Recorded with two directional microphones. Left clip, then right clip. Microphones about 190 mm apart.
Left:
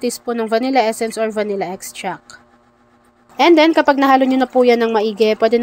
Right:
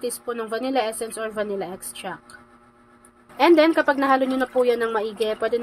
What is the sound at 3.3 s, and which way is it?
A woman's voice, 35° left (ahead or behind).